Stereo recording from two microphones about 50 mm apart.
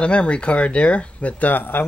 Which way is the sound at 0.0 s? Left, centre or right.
Left.